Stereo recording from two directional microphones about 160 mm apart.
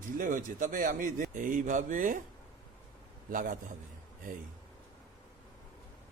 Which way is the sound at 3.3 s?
55° right (ahead or behind).